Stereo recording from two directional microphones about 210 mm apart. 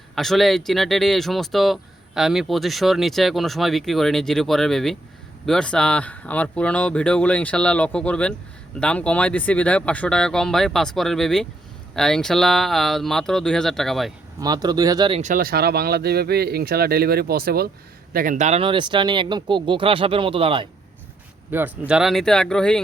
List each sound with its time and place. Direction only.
0.2 s speech: centre (ahead or behind)
14.4 s speech: 20° right (ahead or behind)
15.2 s speech: 40° right (ahead or behind); by 20.7 s 25° right (ahead or behind)
21.5 s speech: 5° right (ahead or behind)